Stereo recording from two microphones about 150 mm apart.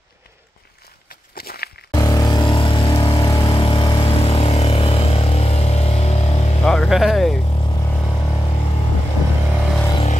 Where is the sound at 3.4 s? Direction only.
35° left (ahead or behind).